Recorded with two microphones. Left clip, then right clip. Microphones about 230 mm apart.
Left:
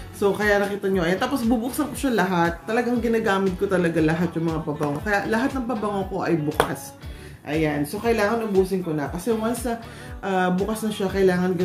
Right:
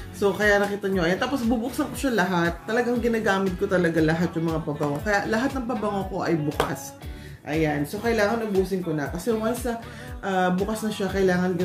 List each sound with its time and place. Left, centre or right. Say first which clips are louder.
0.2 s a woman's voice: even; centre
7.4 s a woman's voice: left 1 dB; centre